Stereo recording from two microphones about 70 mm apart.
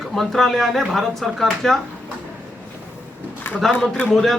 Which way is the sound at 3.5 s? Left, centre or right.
Left.